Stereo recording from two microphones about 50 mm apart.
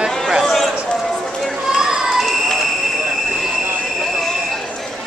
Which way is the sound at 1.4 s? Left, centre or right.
Centre.